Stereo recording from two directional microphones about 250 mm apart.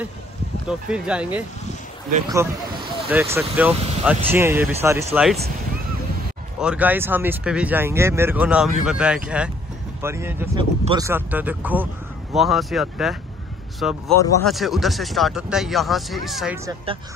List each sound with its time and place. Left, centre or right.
0.7 s speech: centre
6.6 s speech: centre
16.6 s speech: right